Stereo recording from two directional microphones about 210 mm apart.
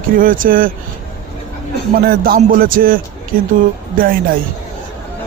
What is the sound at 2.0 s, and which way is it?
Speech, 45° right (ahead or behind).